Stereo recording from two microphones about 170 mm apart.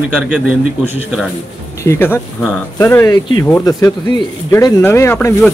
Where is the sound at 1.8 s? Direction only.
15° left (ahead or behind).